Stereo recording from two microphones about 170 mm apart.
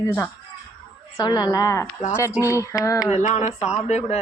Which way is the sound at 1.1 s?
25° left (ahead or behind).